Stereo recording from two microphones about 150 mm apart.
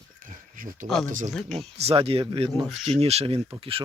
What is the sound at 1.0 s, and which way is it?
Speech, 60° right (ahead or behind).